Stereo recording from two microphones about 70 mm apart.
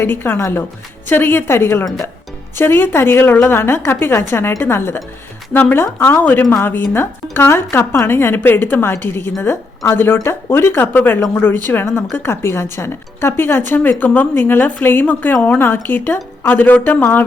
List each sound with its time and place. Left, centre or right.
0.0 s speech: left